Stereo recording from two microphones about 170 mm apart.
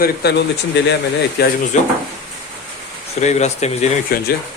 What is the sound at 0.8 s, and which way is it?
Speech, 90° left.